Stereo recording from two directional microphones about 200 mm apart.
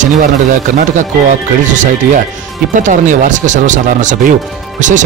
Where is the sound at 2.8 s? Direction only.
40° right (ahead or behind).